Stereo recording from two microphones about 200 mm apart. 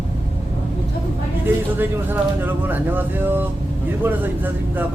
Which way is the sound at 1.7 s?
10° right (ahead or behind).